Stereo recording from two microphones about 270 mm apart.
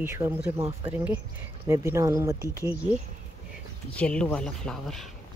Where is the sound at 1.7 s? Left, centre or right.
Centre.